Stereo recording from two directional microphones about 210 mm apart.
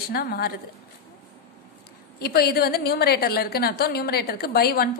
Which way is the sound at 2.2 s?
50° left (ahead or behind).